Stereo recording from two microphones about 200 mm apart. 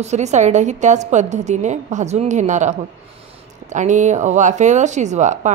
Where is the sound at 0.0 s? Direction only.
35° right (ahead or behind).